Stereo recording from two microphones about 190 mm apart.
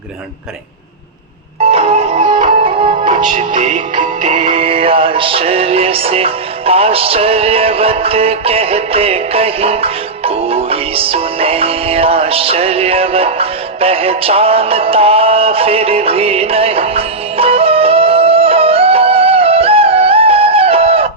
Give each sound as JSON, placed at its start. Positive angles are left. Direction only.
{"t": 1.7, "sound": "music", "side_deg": -30}